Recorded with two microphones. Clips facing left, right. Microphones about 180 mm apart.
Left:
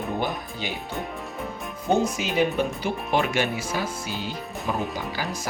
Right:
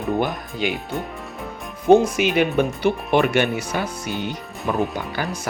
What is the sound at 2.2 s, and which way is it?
Speech, 65° right (ahead or behind).